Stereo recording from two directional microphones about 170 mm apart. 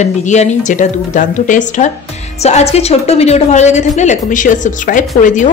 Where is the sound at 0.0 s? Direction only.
45° left (ahead or behind).